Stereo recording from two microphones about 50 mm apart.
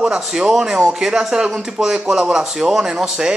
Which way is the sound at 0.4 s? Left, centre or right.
Centre.